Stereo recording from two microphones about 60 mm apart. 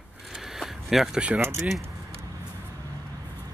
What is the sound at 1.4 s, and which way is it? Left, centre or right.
Speech, right.